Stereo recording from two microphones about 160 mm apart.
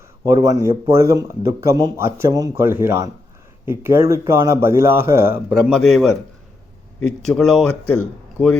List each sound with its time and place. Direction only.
0.4 s speech: 20° right (ahead or behind)
5.5 s speech: centre (ahead or behind)
7.3 s speech: 5° left (ahead or behind)